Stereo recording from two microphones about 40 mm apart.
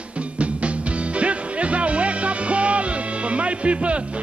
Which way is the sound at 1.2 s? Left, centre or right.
Right.